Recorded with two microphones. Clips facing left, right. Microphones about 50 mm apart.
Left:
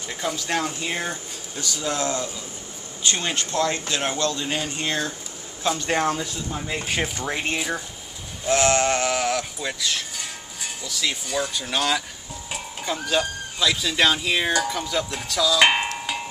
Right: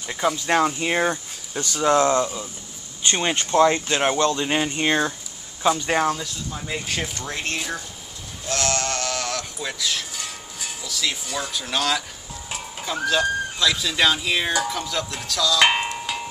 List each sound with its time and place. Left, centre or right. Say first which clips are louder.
0.5 s speech: right 6 dB; right
5.6 s speech: right 3 dB; centre
6.1 s speech: left 3 dB; centre
8.5 s speech: left 6 dB; left; by 15.9 s centre